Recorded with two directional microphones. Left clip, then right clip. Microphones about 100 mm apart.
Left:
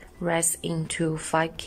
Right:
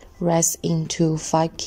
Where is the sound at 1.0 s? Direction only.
30° right (ahead or behind).